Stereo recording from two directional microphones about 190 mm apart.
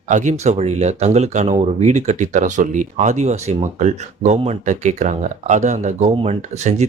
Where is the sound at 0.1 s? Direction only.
40° right (ahead or behind).